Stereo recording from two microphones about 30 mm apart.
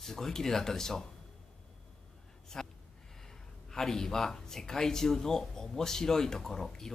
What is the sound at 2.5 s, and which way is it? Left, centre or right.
Speech, centre.